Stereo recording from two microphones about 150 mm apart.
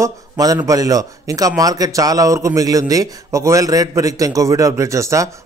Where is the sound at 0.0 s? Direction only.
25° right (ahead or behind).